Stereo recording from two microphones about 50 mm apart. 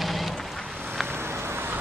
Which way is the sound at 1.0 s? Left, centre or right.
Right.